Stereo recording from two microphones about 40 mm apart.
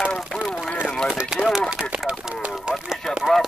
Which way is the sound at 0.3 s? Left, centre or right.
Left.